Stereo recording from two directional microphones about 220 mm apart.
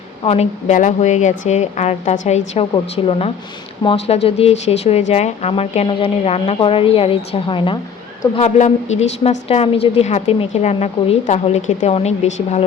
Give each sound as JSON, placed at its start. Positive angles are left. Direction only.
{"t": 0.3, "sound": "a woman's voice", "side_deg": 30}